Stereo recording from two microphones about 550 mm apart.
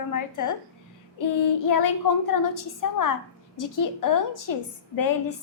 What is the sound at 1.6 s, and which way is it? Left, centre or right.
A woman's voice, left.